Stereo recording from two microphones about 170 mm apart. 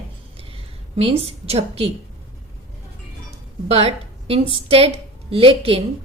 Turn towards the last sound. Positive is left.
turn(degrees=-35)  # may be behind; listen again after turning